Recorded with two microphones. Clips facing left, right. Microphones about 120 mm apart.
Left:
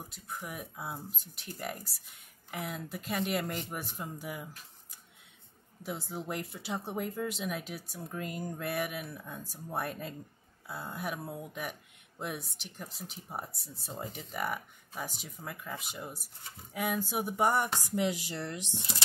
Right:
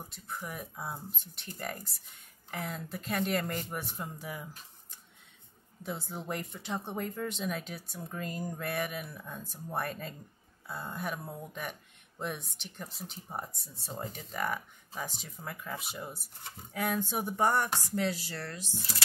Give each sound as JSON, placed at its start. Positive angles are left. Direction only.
{"t": 0.1, "sound": "speech", "side_deg": 5}
{"t": 5.8, "sound": "speech", "side_deg": 0}